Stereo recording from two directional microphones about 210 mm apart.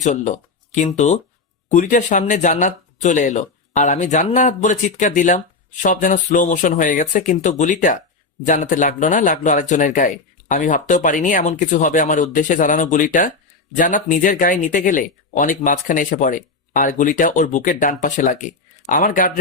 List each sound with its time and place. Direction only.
0.0 s speech: 35° left (ahead or behind)